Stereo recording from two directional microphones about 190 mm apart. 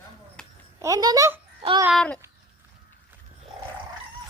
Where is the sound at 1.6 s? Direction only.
30° right (ahead or behind).